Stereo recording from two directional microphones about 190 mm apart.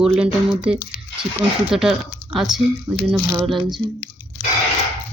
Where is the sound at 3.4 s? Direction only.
Centre (ahead or behind).